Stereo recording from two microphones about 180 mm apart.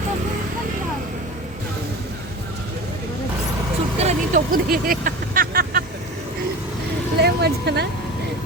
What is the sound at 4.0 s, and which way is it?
Speech, 45° right (ahead or behind).